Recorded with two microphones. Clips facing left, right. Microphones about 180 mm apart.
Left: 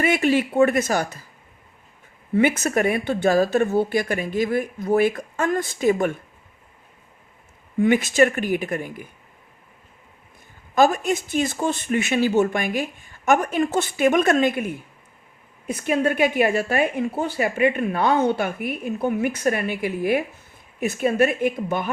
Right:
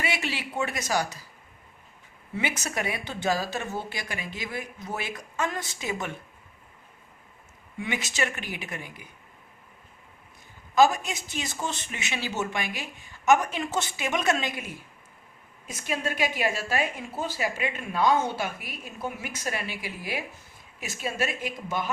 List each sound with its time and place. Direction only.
0.0 s speech: 50° left (ahead or behind)
2.3 s speech: 55° left (ahead or behind)
7.8 s speech: 50° left (ahead or behind)
10.8 s a woman's voice: 55° left (ahead or behind)